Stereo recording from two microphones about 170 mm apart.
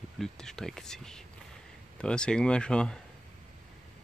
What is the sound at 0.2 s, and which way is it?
Speech, 5° left (ahead or behind).